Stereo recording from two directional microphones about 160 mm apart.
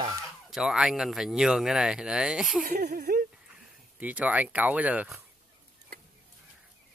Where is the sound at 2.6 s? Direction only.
75° right (ahead or behind).